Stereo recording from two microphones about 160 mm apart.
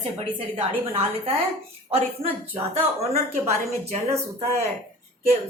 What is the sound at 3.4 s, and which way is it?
Speech, 40° right (ahead or behind).